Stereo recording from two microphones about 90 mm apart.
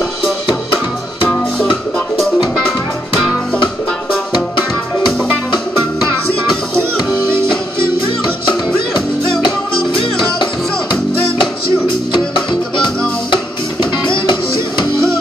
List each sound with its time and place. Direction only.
2.0 s music: centre (ahead or behind)
3.6 s music: 10° left (ahead or behind)
8.2 s music: 60° left (ahead or behind)
14.2 s music: 60° left (ahead or behind)